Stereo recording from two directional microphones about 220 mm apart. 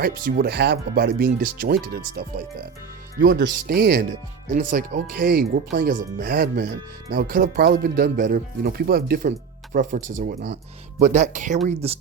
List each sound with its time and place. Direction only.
0.0 s speech: 40° right (ahead or behind)